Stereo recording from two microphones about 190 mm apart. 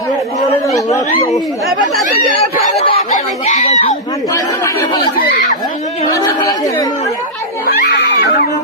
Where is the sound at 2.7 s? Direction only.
30° left (ahead or behind).